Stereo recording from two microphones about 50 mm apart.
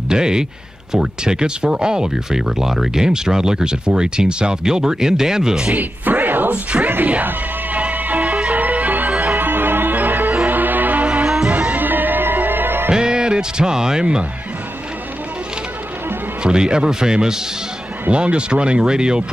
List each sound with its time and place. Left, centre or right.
0.1 s speech: centre
5.7 s speech: right
6.5 s speech: right
7.1 s music: right
11.2 s music: centre
11.5 s music: right
12.9 s speech: centre
16.4 s speech: centre